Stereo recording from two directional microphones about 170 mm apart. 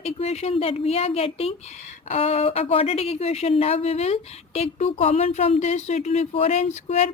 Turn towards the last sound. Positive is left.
turn(degrees=40)  # may be behind; listen again after turning